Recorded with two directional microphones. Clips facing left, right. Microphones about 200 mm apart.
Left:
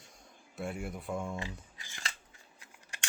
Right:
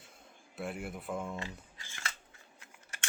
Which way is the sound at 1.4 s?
15° left (ahead or behind).